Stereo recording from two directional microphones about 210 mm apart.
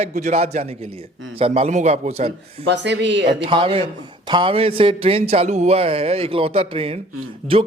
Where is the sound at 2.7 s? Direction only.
55° right (ahead or behind).